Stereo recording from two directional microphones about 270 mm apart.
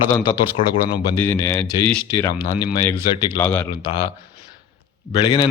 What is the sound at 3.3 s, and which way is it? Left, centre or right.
Speech, centre.